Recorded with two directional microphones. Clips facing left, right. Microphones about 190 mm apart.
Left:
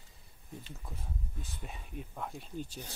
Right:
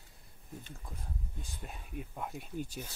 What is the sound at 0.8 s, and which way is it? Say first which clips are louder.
Speech: left 1 dB; centre (ahead or behind).